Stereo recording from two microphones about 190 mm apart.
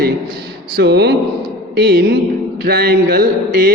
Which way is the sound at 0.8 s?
60° right (ahead or behind).